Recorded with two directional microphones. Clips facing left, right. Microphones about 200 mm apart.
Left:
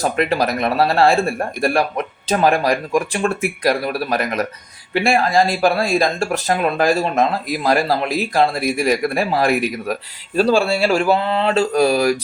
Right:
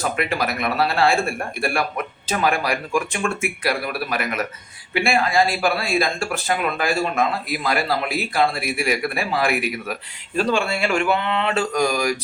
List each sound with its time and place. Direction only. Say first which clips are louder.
0.0 s speech: left 5 dB; 40° left (ahead or behind)